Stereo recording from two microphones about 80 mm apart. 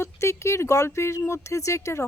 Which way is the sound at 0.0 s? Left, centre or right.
Left.